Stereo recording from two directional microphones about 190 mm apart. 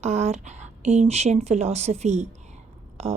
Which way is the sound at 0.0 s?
35° right (ahead or behind).